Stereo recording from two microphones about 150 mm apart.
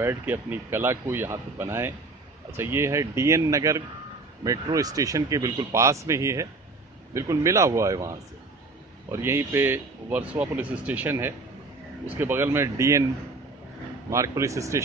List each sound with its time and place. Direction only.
0.0 s speech: 15° right (ahead or behind)
9.1 s speech: 15° right (ahead or behind)
14.1 s speech: 20° right (ahead or behind)